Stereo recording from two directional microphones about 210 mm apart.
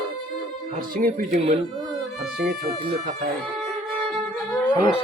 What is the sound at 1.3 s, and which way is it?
Speech, 30° right (ahead or behind).